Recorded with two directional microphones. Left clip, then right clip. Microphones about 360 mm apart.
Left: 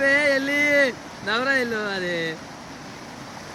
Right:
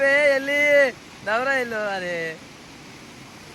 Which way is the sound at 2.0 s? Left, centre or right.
Centre.